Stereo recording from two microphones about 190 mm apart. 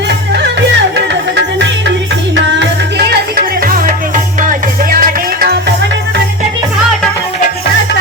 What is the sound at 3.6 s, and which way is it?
Music, 50° right (ahead or behind).